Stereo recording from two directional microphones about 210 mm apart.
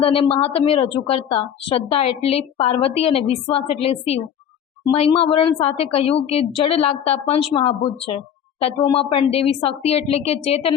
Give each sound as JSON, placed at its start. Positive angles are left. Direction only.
{"t": 0.0, "sound": "a woman's voice", "side_deg": 25}